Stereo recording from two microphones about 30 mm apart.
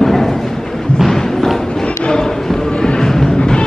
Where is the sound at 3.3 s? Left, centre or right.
Left.